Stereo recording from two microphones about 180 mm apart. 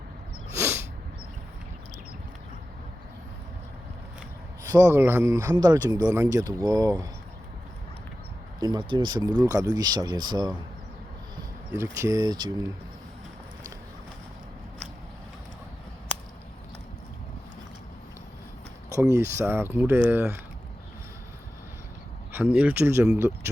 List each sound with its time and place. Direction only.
0.5 s sneeze: 15° right (ahead or behind)
4.6 s speech: 15° right (ahead or behind)
8.6 s speech: 25° right (ahead or behind)
11.7 s speech: 15° right (ahead or behind)
18.9 s speech: 20° right (ahead or behind)
22.5 s speech: 10° right (ahead or behind)